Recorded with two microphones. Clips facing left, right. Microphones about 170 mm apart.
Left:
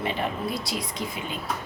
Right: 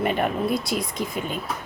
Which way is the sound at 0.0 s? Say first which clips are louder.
Right 5 dB; 55° right (ahead or behind).